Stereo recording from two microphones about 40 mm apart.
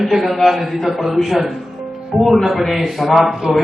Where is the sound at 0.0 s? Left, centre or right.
Centre.